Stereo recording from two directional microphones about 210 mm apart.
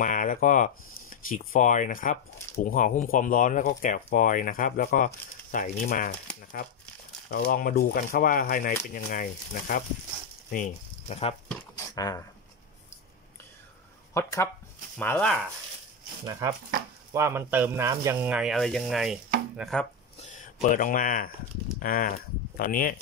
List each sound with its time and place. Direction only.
0.0 s speech: 40° left (ahead or behind)
7.2 s speech: 45° left (ahead or behind)
11.9 s speech: 15° left (ahead or behind)
14.1 s speech: 15° left (ahead or behind)
16.3 s speech: 15° right (ahead or behind); by 19.9 s centre (ahead or behind)
20.6 s speech: 40° left (ahead or behind)